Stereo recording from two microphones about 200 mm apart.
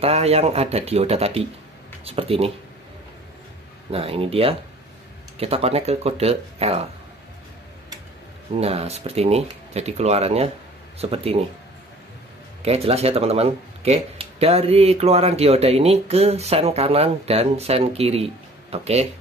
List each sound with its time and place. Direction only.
0.0 s speech: 30° right (ahead or behind)
3.9 s speech: 30° right (ahead or behind)
8.5 s speech: 30° right (ahead or behind)
12.6 s speech: 30° right (ahead or behind)